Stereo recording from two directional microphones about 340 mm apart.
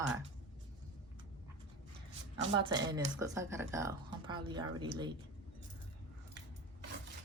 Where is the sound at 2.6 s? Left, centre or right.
Centre.